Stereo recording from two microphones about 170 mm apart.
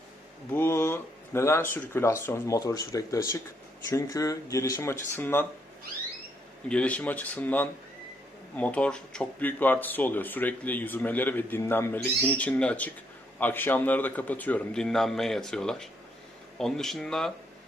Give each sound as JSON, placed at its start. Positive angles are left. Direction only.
{"t": 0.5, "sound": "speech", "side_deg": 15}
{"t": 6.7, "sound": "speech", "side_deg": 5}